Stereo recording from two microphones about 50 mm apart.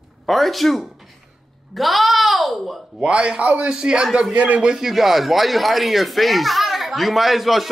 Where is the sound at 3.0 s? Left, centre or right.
Centre.